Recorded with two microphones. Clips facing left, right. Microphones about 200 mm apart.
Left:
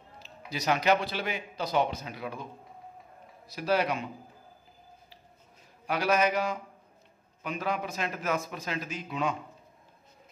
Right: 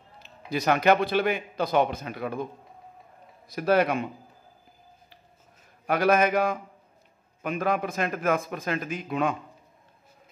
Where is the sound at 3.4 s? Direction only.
55° right (ahead or behind).